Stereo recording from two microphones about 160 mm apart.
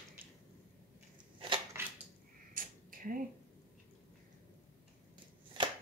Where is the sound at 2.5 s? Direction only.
60° right (ahead or behind).